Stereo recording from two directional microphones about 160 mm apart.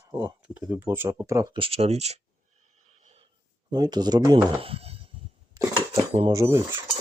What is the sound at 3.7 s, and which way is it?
Speech, 25° right (ahead or behind).